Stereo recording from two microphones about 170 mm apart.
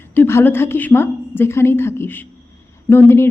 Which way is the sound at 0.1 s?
15° left (ahead or behind).